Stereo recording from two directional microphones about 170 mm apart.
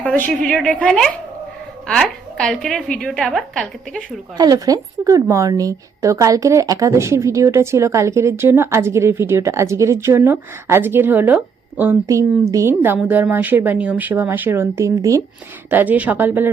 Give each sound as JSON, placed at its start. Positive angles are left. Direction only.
{"t": 0.0, "sound": "a woman's voice", "side_deg": 5}
{"t": 4.4, "sound": "a woman's voice", "side_deg": -20}